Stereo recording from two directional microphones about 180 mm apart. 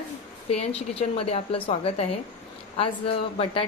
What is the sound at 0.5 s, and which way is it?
Speech, 35° left (ahead or behind).